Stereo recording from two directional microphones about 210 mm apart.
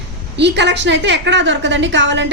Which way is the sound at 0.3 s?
55° right (ahead or behind).